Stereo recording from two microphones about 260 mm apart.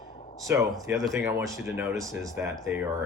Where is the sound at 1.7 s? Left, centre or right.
Centre.